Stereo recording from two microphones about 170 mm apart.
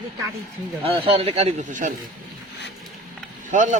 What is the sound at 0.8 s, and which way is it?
Speech, 35° right (ahead or behind).